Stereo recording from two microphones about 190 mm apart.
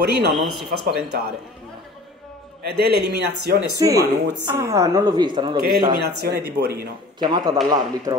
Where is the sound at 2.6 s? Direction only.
55° right (ahead or behind).